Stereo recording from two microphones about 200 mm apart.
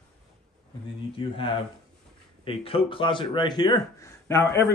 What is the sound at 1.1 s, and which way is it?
Speech, 25° left (ahead or behind).